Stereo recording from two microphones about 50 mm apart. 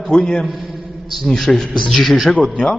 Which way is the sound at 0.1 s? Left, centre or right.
Centre.